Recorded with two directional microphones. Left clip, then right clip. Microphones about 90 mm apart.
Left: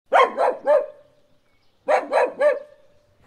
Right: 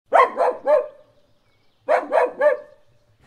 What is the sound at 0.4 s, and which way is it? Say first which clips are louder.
Dog: even; 35° left (ahead or behind).